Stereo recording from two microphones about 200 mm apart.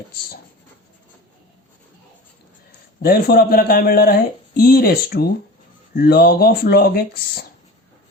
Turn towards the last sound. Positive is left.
turn(degrees=50)  # may be behind; listen again after turning